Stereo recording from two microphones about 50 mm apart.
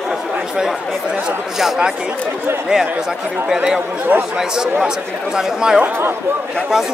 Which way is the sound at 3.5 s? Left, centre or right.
Centre.